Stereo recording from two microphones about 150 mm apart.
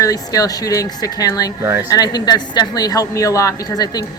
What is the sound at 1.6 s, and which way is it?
Speech, 15° right (ahead or behind).